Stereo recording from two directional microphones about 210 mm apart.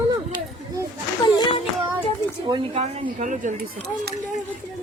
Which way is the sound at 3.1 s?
35° right (ahead or behind).